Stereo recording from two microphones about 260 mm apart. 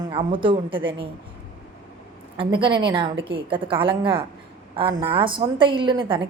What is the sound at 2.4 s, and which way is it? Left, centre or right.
A woman's voice, centre.